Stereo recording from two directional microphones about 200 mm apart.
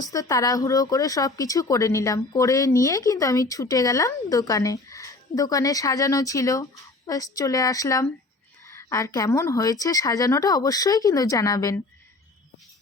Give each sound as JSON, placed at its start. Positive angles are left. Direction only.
{"t": 0.0, "sound": "speech", "side_deg": 15}